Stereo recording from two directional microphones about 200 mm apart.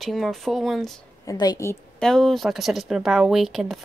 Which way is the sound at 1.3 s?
20° left (ahead or behind).